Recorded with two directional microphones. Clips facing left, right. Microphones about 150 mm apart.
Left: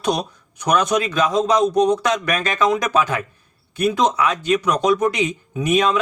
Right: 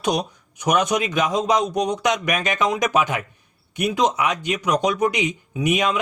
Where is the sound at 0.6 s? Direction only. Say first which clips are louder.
Left 2 dB; 15° right (ahead or behind).